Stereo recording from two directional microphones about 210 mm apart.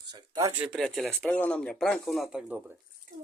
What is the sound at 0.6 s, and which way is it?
Speech, centre (ahead or behind).